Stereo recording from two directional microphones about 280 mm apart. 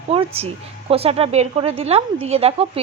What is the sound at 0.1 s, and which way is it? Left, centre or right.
A woman's voice, right.